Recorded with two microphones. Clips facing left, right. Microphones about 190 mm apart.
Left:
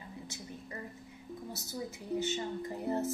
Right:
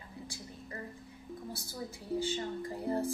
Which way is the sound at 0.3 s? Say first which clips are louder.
Left 1 dB; 20° left (ahead or behind).